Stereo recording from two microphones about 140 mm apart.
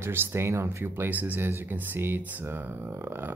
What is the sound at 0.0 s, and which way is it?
Speech, 15° right (ahead or behind).